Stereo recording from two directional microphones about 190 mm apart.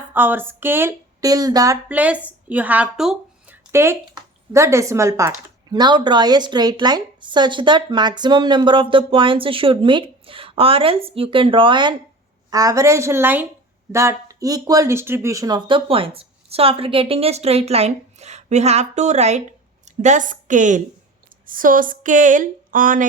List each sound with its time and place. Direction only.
0.1 s a woman's voice: 10° right (ahead or behind); by 23.0 s 45° right (ahead or behind)